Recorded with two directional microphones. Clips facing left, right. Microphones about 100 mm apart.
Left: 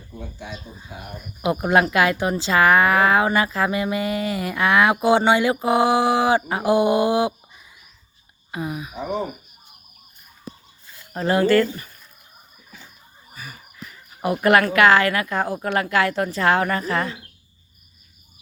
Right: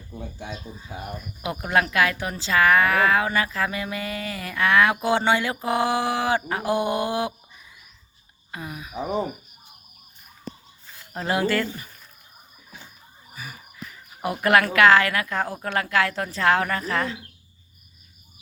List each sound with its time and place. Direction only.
1.4 s speech: 20° left (ahead or behind)
5.6 s mantra: 10° left (ahead or behind)
8.5 s mantra: 15° left (ahead or behind)
11.1 s speech: centre (ahead or behind)
13.8 s speech: centre (ahead or behind)